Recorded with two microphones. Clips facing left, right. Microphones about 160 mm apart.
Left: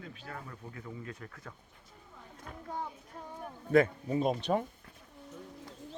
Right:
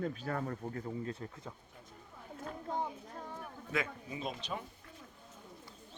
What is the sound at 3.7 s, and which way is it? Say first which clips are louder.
Speech: left 12 dB; 50° left (ahead or behind).